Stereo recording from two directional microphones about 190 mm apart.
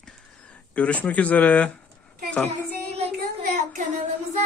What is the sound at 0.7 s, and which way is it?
Speech, 5° left (ahead or behind).